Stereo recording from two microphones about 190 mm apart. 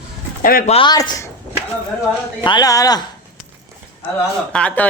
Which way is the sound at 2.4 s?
20° left (ahead or behind).